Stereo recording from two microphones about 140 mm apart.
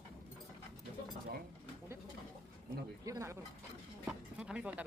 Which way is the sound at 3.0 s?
20° right (ahead or behind).